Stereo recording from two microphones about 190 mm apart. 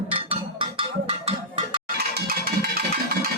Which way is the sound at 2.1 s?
55° right (ahead or behind).